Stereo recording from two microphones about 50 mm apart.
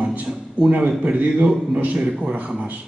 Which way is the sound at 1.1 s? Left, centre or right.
Right.